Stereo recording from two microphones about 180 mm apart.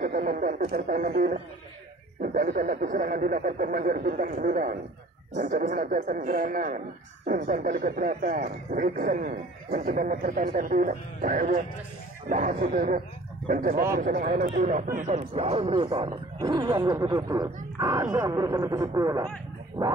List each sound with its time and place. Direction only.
0.0 s speech: 50° right (ahead or behind); by 19.2 s 20° right (ahead or behind)